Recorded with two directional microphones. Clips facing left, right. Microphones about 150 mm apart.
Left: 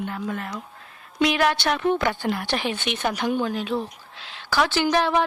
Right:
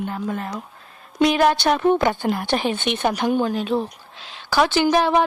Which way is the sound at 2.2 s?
45° right (ahead or behind).